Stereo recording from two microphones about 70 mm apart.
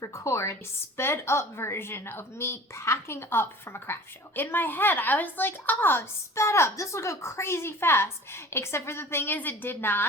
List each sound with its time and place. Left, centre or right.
0.0 s a woman's voice: left